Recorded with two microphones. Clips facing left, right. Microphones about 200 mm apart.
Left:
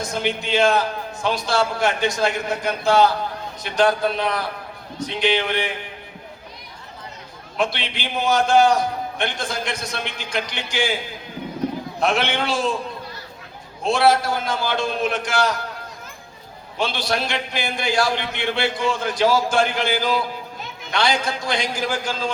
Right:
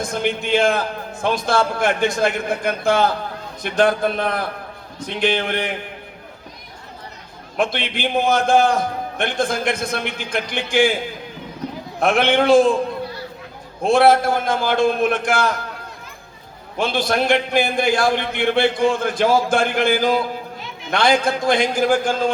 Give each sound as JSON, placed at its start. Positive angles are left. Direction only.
{"t": 0.0, "sound": "a man's voice", "side_deg": -55}
{"t": 7.5, "sound": "a man's voice", "side_deg": -50}
{"t": 11.9, "sound": "a man's voice", "side_deg": -50}
{"t": 13.8, "sound": "a man's voice", "side_deg": -55}
{"t": 16.7, "sound": "a man's voice", "side_deg": -50}